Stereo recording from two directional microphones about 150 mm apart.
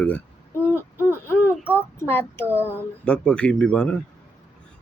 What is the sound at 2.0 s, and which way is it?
Speech, 15° left (ahead or behind).